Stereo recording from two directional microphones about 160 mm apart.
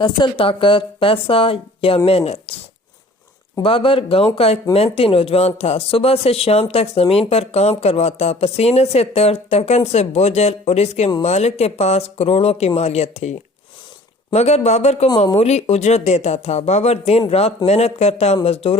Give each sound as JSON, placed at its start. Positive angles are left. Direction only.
{"t": 0.0, "sound": "a man's voice", "side_deg": 30}
{"t": 3.6, "sound": "a man's voice", "side_deg": 35}
{"t": 14.3, "sound": "a man's voice", "side_deg": 45}